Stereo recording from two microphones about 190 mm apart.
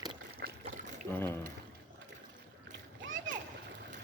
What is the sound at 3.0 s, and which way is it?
Splash, 80° right.